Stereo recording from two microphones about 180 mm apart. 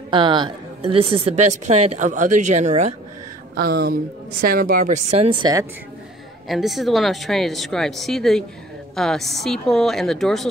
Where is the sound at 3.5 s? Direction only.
60° right (ahead or behind); by 5.7 s 20° right (ahead or behind).